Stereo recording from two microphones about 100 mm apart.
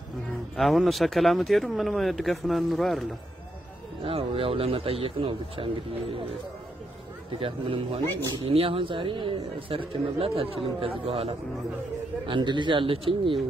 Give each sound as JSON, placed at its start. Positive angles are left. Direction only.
{"t": 0.6, "sound": "speech", "side_deg": 0}
{"t": 4.0, "sound": "speech", "side_deg": -65}
{"t": 7.3, "sound": "speech", "side_deg": -65}
{"t": 12.3, "sound": "speech", "side_deg": -50}